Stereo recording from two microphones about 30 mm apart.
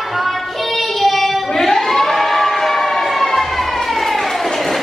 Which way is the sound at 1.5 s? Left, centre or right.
Centre.